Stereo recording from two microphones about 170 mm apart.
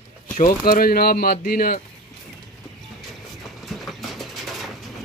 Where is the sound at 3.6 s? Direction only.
Centre (ahead or behind).